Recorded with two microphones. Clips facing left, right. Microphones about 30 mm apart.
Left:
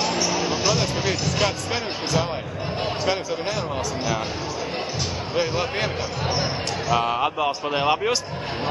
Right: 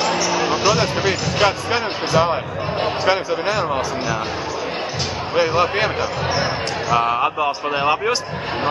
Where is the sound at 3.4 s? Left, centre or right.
Right.